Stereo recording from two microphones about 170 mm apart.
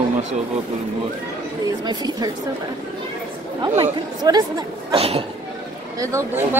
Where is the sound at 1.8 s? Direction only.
25° right (ahead or behind).